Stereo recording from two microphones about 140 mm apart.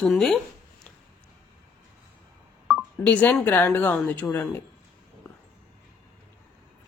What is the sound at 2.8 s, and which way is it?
A woman's voice, 10° left (ahead or behind).